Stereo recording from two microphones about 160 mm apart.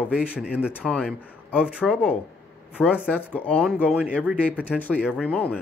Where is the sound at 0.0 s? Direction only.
10° left (ahead or behind).